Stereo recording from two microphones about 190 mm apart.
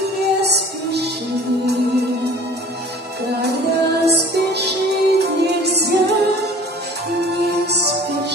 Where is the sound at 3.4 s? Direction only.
60° right (ahead or behind).